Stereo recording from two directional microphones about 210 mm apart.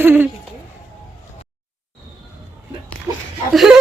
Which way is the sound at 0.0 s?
10° right (ahead or behind).